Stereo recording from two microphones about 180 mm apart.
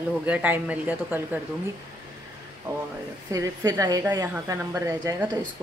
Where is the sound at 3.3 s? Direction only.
20° right (ahead or behind).